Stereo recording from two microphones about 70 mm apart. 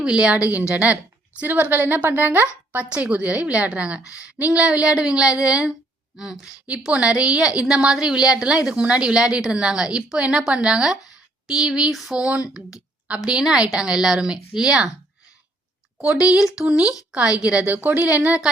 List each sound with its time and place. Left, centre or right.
0.0 s a woman's voice: centre
16.2 s a woman's voice: centre